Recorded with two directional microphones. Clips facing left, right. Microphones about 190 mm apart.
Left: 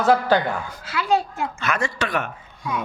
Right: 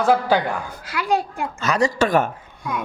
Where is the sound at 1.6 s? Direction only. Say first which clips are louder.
Right 8 dB; 35° right (ahead or behind).